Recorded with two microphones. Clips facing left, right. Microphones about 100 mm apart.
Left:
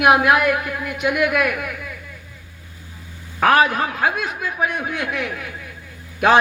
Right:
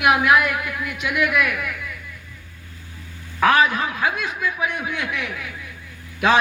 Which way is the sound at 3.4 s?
50° left (ahead or behind).